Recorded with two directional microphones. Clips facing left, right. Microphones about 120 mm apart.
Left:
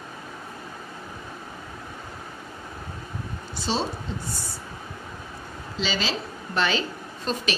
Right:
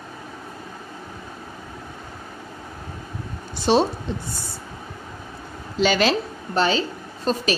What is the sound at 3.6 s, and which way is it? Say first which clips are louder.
Speech: right 9 dB; 65° right (ahead or behind).